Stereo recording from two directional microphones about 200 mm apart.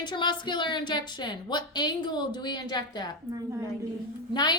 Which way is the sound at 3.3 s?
15° right (ahead or behind).